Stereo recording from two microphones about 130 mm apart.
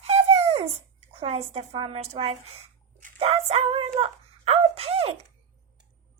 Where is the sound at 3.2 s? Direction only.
50° right (ahead or behind).